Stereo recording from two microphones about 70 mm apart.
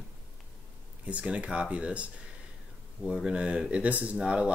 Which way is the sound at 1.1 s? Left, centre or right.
Centre.